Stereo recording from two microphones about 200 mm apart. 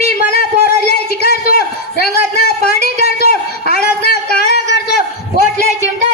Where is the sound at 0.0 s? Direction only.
50° left (ahead or behind).